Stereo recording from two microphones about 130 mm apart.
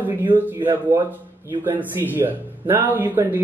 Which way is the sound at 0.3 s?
15° right (ahead or behind).